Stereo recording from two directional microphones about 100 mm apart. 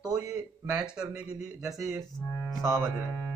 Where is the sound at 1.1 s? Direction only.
5° right (ahead or behind).